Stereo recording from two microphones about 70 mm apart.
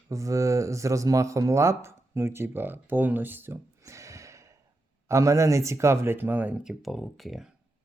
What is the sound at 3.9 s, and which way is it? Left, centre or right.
Gasp, right.